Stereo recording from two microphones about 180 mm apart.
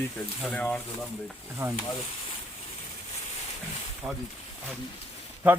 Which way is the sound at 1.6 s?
15° right (ahead or behind).